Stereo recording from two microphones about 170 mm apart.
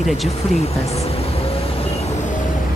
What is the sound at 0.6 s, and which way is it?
Speech, 40° left (ahead or behind).